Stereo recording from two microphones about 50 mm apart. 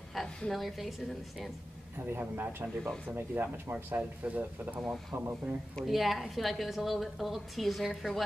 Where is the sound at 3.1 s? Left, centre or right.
Right.